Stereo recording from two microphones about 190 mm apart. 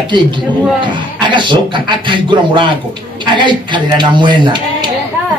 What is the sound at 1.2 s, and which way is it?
Speech, 25° right (ahead or behind).